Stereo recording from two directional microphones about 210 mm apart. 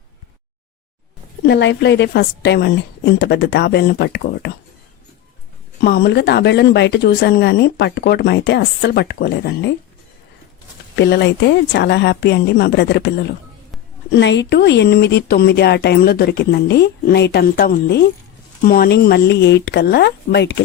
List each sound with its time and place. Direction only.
1.5 s speech: 55° left (ahead or behind)
5.8 s speech: 50° left (ahead or behind)
10.9 s speech: 55° left (ahead or behind)